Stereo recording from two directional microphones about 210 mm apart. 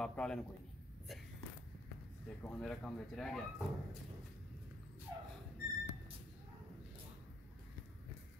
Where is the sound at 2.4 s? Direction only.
5° left (ahead or behind).